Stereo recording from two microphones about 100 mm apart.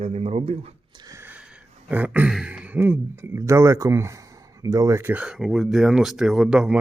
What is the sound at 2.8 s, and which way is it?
Speech, 25° right (ahead or behind).